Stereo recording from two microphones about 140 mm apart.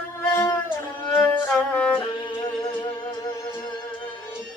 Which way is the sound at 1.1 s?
15° left (ahead or behind).